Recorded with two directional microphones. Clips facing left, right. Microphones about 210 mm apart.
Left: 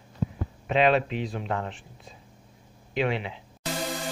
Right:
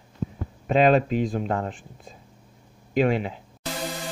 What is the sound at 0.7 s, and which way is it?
Speech, 40° right (ahead or behind).